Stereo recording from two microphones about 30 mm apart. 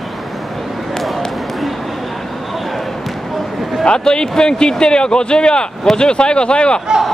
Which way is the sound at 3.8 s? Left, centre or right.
Left.